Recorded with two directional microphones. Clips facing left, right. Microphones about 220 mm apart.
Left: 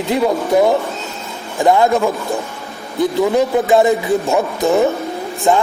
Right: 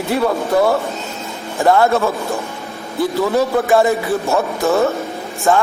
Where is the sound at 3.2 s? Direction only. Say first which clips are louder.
Left 2 dB; 15° left (ahead or behind).